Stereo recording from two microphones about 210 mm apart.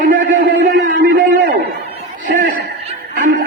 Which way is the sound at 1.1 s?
40° right (ahead or behind).